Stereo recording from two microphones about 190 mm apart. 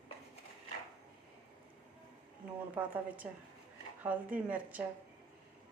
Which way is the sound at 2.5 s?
10° right (ahead or behind).